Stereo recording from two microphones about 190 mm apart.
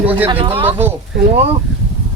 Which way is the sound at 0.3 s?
25° right (ahead or behind).